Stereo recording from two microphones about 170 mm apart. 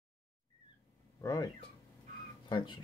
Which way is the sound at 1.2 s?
20° left (ahead or behind).